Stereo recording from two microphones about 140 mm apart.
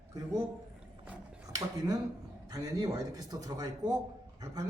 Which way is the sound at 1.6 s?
25° right (ahead or behind).